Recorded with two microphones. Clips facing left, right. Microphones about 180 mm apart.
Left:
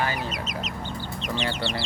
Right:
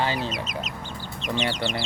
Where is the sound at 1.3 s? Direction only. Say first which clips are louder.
Right 2 dB; 15° right (ahead or behind).